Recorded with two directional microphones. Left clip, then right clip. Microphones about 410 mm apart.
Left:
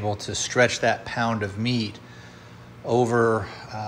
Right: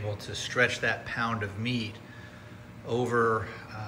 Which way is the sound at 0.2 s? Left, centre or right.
Centre.